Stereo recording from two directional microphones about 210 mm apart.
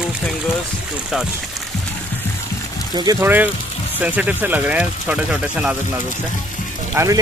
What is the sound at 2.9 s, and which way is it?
Speech, 20° right (ahead or behind).